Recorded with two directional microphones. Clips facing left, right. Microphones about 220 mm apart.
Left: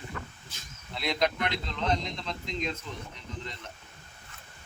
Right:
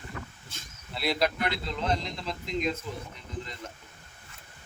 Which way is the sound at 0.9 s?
5° right (ahead or behind).